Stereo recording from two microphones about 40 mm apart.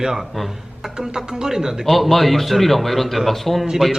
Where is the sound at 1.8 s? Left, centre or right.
Centre.